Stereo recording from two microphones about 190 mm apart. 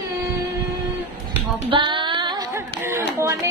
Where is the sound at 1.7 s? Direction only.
25° right (ahead or behind).